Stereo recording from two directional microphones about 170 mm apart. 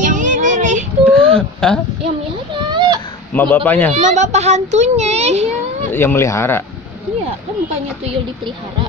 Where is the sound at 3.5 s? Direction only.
10° left (ahead or behind).